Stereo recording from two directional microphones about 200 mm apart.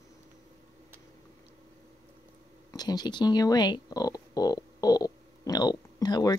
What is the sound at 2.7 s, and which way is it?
Speech, 20° left (ahead or behind).